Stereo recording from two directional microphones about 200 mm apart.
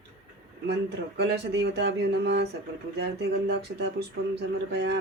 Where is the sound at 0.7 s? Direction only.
55° right (ahead or behind).